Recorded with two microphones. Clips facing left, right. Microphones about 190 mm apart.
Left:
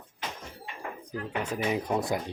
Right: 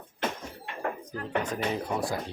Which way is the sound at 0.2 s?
60° right (ahead or behind).